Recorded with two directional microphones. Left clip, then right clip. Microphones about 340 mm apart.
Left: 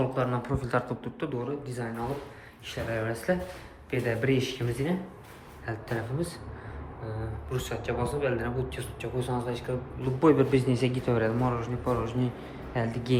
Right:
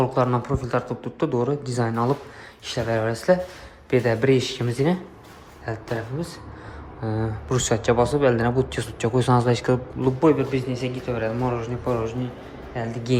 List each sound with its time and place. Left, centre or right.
0.0 s speech: centre
7.5 s speech: centre
10.2 s a man's voice: centre